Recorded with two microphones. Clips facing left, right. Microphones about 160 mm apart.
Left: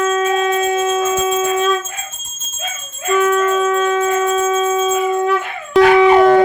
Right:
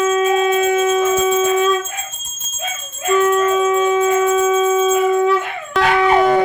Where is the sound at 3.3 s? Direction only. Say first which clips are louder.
Even; 20° right (ahead or behind).